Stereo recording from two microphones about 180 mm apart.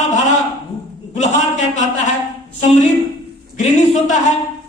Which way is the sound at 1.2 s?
40° left (ahead or behind).